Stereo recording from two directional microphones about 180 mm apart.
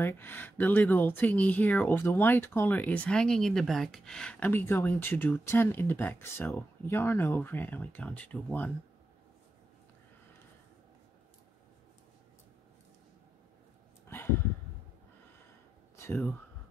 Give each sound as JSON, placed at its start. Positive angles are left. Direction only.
{"t": 0.0, "sound": "speech", "side_deg": 10}
{"t": 14.0, "sound": "a sound", "side_deg": 10}
{"t": 16.0, "sound": "speech", "side_deg": 15}